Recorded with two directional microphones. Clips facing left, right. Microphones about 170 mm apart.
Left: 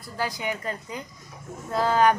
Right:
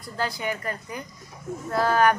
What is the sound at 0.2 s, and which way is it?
A woman's voice, 15° left (ahead or behind).